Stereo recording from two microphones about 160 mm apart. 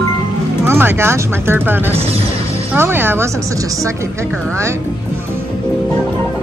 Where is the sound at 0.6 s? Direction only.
15° right (ahead or behind).